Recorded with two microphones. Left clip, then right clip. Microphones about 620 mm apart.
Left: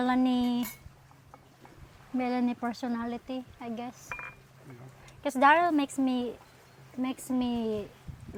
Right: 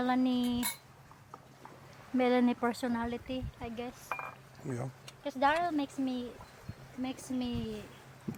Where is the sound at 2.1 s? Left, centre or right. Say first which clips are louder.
Right 2 dB; centre.